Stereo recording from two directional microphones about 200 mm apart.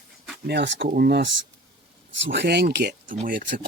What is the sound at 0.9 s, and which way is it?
Speech, 50° right (ahead or behind).